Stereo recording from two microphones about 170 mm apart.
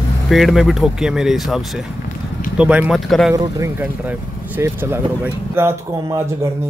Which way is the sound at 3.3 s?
15° right (ahead or behind).